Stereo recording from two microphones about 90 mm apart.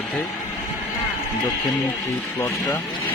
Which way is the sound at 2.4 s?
25° left (ahead or behind).